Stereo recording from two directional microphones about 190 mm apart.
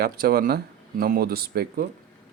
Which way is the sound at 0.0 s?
50° right (ahead or behind).